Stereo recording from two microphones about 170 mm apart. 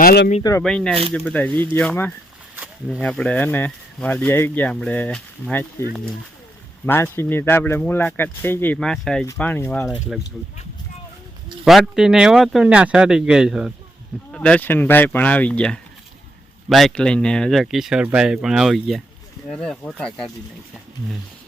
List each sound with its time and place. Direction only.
0.0 s speech: 65° left (ahead or behind)
0.6 s speech: 5° left (ahead or behind)
6.8 s speech: 15° left (ahead or behind)
11.6 s speech: 5° right (ahead or behind)